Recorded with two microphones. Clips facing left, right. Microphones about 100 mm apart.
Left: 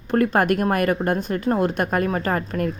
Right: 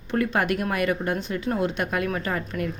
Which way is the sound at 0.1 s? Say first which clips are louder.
Left 5 dB; 45° left (ahead or behind).